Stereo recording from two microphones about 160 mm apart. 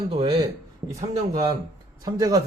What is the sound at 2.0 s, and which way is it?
Speech, 25° right (ahead or behind).